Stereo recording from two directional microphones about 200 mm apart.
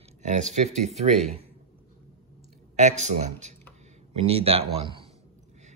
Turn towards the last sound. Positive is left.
turn(degrees=-25)  # may be behind; listen again after turning